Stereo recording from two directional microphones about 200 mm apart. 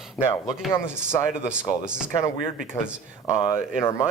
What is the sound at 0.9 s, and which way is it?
Speech, 5° right (ahead or behind).